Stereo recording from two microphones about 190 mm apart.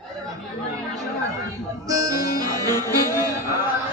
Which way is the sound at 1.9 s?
20° right (ahead or behind).